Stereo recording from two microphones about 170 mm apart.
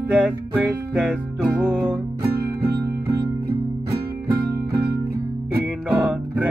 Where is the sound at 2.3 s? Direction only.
65° right (ahead or behind).